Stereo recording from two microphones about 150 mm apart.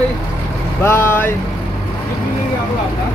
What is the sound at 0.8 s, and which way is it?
Speech, 15° left (ahead or behind).